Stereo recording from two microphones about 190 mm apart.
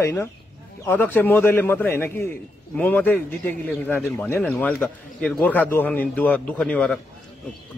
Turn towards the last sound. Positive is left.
turn(degrees=5)  # may be behind; listen again after turning